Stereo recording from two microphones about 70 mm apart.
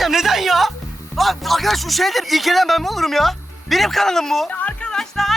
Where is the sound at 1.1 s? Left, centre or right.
Centre.